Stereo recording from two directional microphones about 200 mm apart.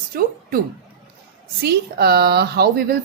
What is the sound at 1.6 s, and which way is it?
A woman's voice, 50° right (ahead or behind).